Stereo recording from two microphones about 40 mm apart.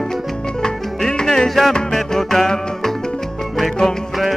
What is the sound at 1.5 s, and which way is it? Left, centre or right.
Music, centre.